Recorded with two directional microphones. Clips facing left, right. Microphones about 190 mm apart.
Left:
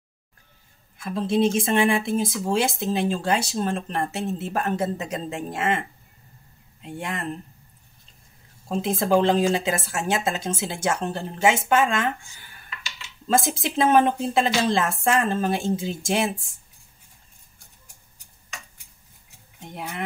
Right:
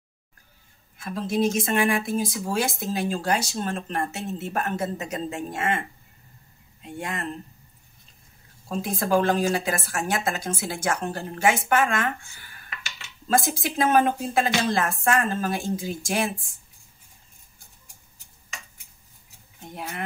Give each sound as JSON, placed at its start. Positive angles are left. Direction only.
{"t": 1.1, "sound": "speech", "side_deg": 30}
{"t": 6.8, "sound": "speech", "side_deg": 25}
{"t": 8.6, "sound": "speech", "side_deg": 25}
{"t": 12.6, "sound": "a sound", "side_deg": -55}
{"t": 13.3, "sound": "speech", "side_deg": 25}